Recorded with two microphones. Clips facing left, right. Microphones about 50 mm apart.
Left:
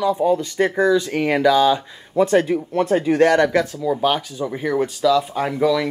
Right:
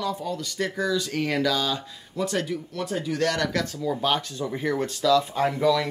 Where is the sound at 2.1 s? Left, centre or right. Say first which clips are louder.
Left 11 dB; left.